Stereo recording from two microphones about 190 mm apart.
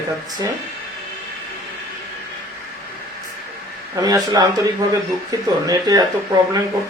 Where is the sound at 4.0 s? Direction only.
20° right (ahead or behind).